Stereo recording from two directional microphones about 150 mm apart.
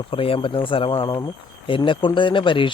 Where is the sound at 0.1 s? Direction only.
40° left (ahead or behind).